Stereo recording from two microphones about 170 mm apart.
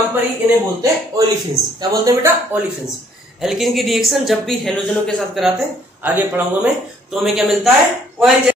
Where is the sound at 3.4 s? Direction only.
Centre (ahead or behind).